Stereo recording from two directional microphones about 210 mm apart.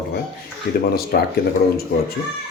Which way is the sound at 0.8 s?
45° left (ahead or behind).